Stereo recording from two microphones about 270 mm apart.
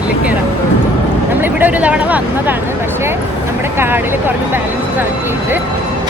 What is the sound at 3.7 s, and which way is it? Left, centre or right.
Speech, centre.